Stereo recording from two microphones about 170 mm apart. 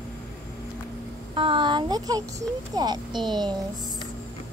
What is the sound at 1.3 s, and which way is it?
A woman's voice, 30° right (ahead or behind).